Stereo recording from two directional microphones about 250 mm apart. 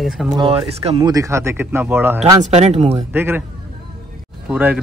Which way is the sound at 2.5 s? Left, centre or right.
Right.